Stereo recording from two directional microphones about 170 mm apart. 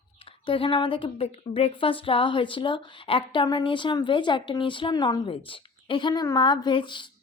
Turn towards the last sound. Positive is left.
turn(degrees=30)  # may be behind; listen again after turning